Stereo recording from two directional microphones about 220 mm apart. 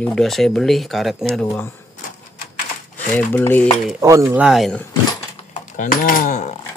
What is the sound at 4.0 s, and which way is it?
Speech, 15° right (ahead or behind).